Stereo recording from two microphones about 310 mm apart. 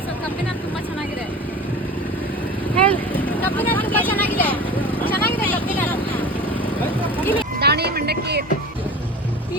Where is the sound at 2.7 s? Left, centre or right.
Centre.